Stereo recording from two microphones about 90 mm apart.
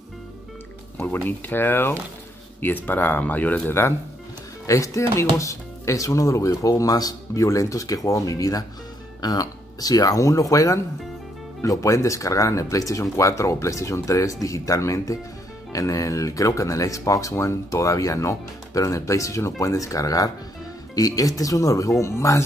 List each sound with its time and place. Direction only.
0.9 s speech: 20° left (ahead or behind)
4.6 s speech: 35° left (ahead or behind)